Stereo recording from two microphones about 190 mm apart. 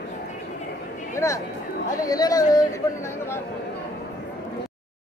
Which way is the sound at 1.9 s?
20° left (ahead or behind).